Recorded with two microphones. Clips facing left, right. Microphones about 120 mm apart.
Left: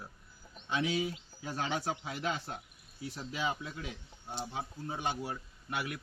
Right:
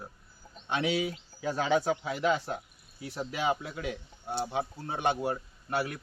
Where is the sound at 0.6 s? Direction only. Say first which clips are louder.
Right 3 dB; 70° right (ahead or behind); by 1.5 s 90° right.